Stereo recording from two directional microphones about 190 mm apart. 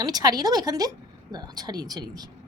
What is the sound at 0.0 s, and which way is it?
A woman's voice, 20° right (ahead or behind).